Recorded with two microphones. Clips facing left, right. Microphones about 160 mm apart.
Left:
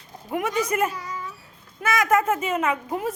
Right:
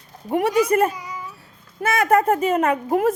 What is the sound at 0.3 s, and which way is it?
Speech, 35° right (ahead or behind).